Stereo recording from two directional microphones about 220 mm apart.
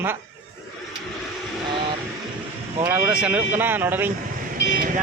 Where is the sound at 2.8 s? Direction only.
10° right (ahead or behind).